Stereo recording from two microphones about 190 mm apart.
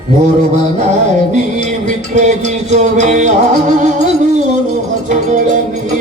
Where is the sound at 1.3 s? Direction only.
40° right (ahead or behind).